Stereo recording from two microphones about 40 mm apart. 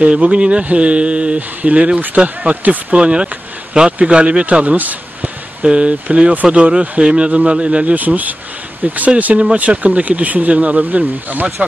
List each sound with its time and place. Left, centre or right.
0.0 s speech: right
2.5 s speech: right
2.9 s speech: right
5.6 s speech: right
7.0 s speech: centre
7.2 s speech: right
7.8 s speech: right